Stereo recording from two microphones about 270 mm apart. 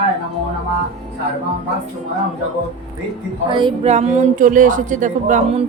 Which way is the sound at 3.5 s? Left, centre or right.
Centre.